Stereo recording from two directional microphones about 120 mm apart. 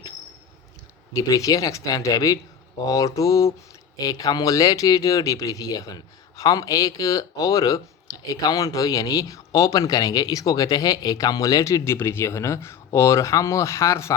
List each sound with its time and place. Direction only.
1.1 s speech: 30° left (ahead or behind)